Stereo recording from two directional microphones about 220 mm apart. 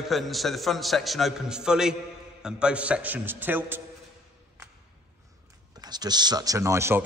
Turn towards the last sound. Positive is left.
turn(degrees=-10)  # may be behind; listen again after turning